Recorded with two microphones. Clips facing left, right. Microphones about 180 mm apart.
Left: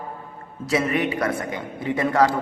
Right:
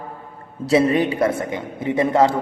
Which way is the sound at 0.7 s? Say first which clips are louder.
Right 6 dB; 30° right (ahead or behind).